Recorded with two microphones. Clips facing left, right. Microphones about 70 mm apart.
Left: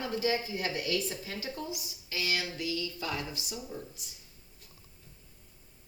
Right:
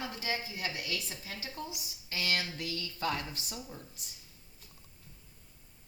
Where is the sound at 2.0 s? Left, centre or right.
Right.